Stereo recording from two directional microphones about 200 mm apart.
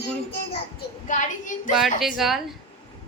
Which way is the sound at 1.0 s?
40° left (ahead or behind).